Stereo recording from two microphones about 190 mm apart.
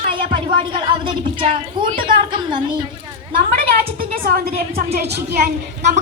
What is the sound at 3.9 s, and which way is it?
A woman's voice, 50° right (ahead or behind).